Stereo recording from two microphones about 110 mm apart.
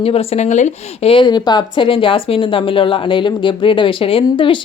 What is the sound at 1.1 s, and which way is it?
A woman's voice, 40° left (ahead or behind).